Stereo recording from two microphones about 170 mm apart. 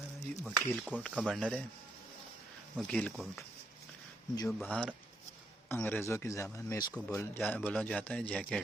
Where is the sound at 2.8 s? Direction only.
5° left (ahead or behind).